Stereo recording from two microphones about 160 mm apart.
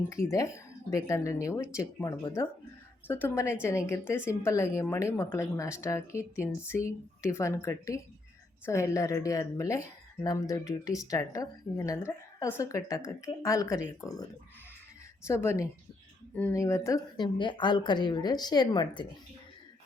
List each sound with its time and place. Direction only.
0.1 s a woman's voice: 20° left (ahead or behind)
15.3 s a woman's voice: 15° left (ahead or behind)